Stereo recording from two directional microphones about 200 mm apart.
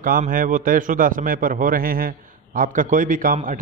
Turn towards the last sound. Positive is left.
turn(degrees=-45)  # may be behind; listen again after turning